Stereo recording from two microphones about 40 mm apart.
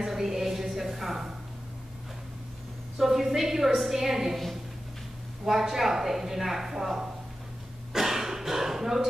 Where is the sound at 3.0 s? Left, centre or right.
Centre.